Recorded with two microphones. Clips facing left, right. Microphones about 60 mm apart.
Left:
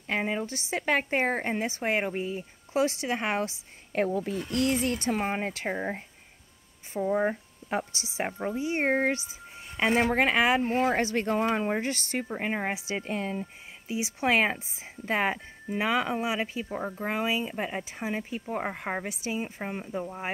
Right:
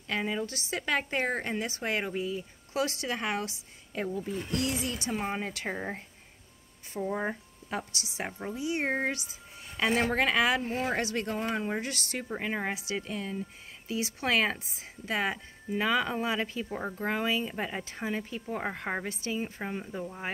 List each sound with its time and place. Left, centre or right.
0.0 s speech: left
3.9 s speech: left
5.7 s speech: centre
7.7 s speech: left
11.3 s speech: left
13.8 s speech: centre
15.8 s speech: left